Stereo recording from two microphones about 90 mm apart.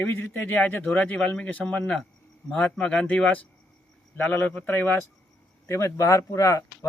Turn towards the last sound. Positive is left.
turn(degrees=35)  # may be behind; listen again after turning